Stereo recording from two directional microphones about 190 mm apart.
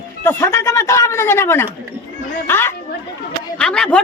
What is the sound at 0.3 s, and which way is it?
A woman's voice, 15° left (ahead or behind).